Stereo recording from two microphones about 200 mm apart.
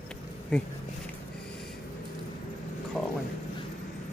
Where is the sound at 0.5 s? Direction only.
Centre (ahead or behind).